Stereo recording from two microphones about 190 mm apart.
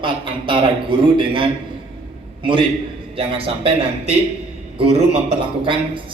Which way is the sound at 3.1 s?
30° right (ahead or behind).